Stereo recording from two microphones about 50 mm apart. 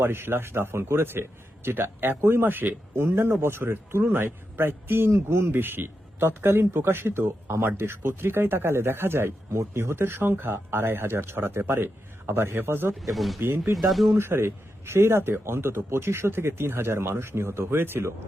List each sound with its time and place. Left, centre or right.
0.0 s speech: right
2.9 s speech: right
5.5 s speech: right
13.0 s speech: centre
14.2 s speech: right